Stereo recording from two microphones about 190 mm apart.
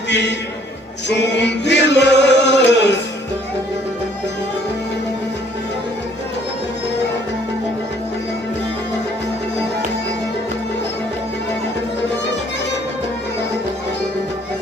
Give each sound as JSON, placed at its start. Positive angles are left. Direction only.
{"t": 0.1, "sound": "a man's voice", "side_deg": 65}
{"t": 1.0, "sound": "chant", "side_deg": 65}